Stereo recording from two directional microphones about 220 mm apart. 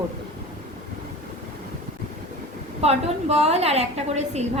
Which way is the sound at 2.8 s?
30° right (ahead or behind).